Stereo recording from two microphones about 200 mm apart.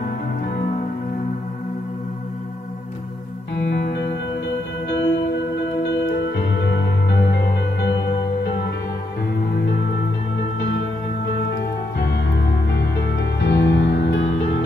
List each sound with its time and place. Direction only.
3.5 s music: 60° left (ahead or behind)
11.5 s music: 55° left (ahead or behind)